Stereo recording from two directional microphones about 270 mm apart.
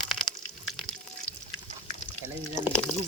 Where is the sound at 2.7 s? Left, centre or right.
Centre.